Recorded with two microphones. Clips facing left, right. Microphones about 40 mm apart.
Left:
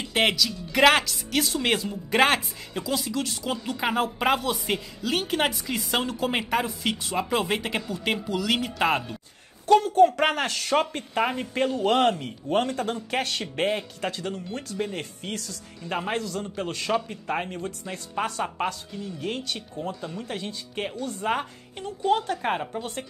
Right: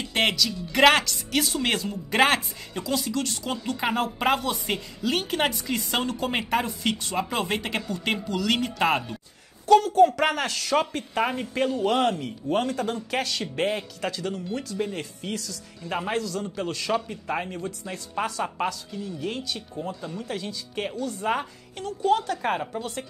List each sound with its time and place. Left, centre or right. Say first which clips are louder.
0.0 s speech: left 1 dB; centre
9.7 s speech: right 1 dB; left
11.8 s speech: left 3 dB; left
19.8 s speech: left 1 dB; left
21.3 s speech: left 1 dB; left